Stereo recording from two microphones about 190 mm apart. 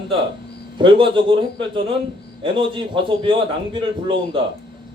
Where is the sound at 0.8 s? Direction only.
25° right (ahead or behind).